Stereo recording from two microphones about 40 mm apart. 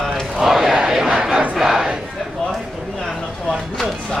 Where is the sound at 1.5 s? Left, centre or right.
Centre.